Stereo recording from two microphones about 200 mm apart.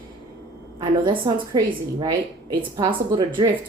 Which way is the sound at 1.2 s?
20° right (ahead or behind).